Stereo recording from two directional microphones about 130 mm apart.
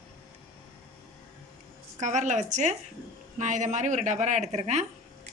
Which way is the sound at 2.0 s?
70° right (ahead or behind).